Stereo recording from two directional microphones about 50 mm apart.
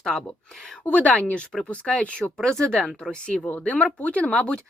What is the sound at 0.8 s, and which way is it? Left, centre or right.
Speech, left.